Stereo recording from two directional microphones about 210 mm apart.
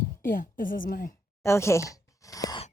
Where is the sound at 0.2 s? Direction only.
40° left (ahead or behind).